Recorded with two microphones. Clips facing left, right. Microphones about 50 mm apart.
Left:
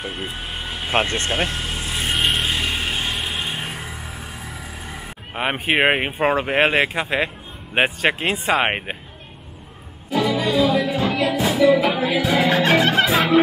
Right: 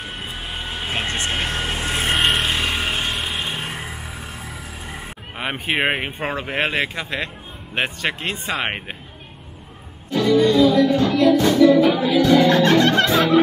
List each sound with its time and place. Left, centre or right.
0.5 s vehicle: centre
1.0 s speech: right
1.5 s vehicle: right
2.1 s vehicle: centre
2.7 s a sound: centre
3.4 s music: centre
5.3 s speech: centre
10.2 s music: centre